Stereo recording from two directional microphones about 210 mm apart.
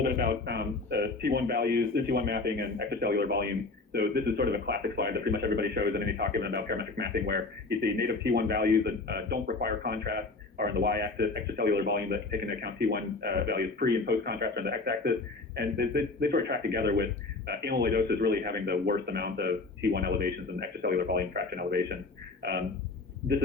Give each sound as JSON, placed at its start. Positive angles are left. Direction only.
{"t": 0.0, "sound": "a man's voice", "side_deg": -50}